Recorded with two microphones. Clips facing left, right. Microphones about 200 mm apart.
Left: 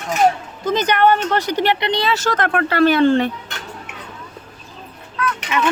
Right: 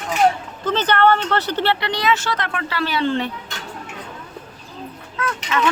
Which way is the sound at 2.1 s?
45° left (ahead or behind).